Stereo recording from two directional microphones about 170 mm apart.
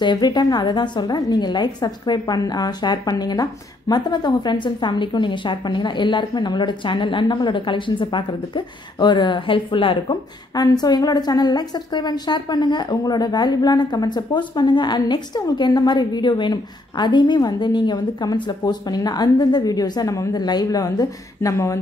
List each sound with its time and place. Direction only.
0.0 s a woman's voice: 25° left (ahead or behind)